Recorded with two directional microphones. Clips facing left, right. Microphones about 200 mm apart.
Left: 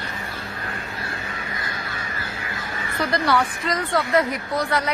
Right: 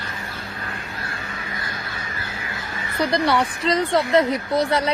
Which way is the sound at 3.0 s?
20° right (ahead or behind).